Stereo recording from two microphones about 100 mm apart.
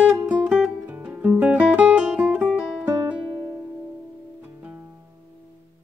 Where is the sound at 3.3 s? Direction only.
30° right (ahead or behind).